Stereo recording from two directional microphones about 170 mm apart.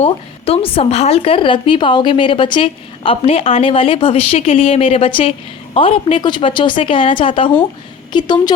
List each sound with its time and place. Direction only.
0.0 s a woman's voice: 35° left (ahead or behind)